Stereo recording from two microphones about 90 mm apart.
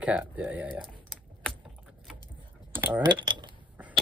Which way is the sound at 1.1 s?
Centre (ahead or behind).